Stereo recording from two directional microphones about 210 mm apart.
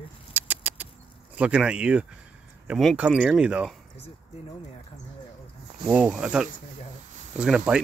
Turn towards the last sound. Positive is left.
turn(degrees=-5)  # may be behind; listen again after turning